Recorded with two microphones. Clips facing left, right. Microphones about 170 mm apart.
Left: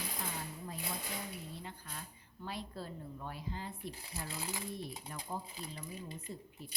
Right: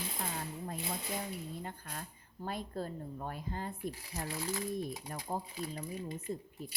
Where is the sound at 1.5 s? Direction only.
50° right (ahead or behind).